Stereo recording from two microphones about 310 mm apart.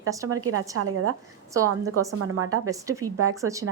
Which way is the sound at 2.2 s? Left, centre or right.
Right.